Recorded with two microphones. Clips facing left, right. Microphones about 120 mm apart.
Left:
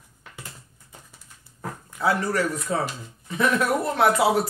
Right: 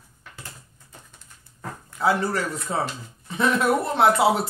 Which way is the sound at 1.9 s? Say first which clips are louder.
Right 1 dB; 25° right (ahead or behind).